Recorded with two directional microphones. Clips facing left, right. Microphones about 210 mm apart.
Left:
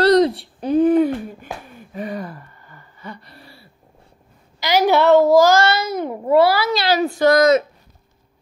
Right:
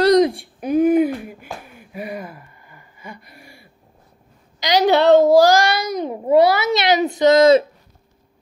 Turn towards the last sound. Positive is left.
turn(degrees=-30)  # may be behind; listen again after turning